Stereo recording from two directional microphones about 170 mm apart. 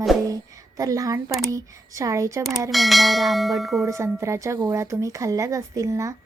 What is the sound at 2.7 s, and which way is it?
Church bell, centre (ahead or behind).